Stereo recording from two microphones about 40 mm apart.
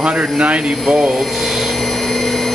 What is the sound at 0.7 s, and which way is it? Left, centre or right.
Speech, centre.